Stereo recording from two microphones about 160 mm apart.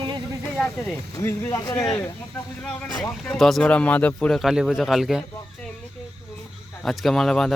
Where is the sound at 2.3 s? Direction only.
5° left (ahead or behind).